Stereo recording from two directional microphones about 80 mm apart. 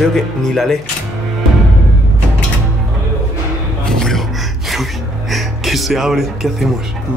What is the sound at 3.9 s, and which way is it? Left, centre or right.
Gasp, centre.